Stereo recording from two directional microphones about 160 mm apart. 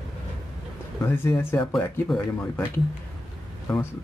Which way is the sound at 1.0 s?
15° left (ahead or behind).